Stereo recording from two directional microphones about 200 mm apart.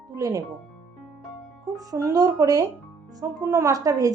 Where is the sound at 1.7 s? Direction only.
15° right (ahead or behind).